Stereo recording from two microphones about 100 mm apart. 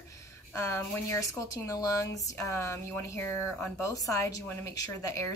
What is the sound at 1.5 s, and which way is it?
Speech, 35° left (ahead or behind).